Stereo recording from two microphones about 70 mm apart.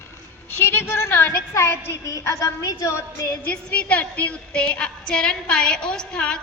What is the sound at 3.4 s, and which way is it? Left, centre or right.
A woman's voice, left.